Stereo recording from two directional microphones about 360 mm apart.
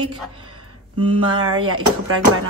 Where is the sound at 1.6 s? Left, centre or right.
Right.